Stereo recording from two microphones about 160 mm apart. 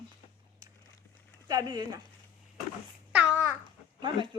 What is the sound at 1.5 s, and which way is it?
Speech, 25° right (ahead or behind).